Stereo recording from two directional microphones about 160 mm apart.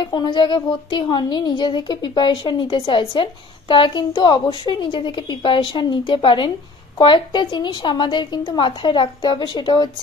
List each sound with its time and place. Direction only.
0.1 s a woman's voice: 30° left (ahead or behind)